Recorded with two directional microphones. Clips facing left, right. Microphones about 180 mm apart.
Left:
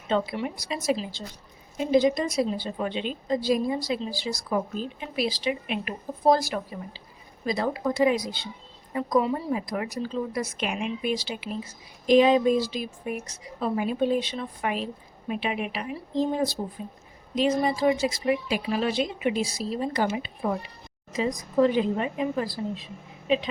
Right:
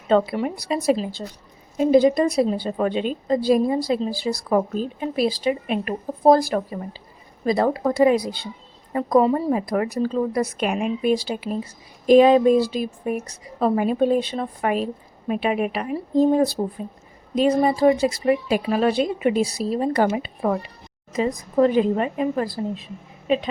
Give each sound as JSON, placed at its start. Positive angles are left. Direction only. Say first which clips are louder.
{"t": 0.1, "sound": "a woman's voice", "louder": "right 7 dB", "side_deg": -55}
{"t": 2.5, "sound": "a woman's voice", "louder": "right 7 dB", "side_deg": -50}